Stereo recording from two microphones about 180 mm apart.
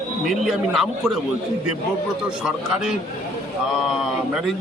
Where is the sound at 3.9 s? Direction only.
Centre (ahead or behind).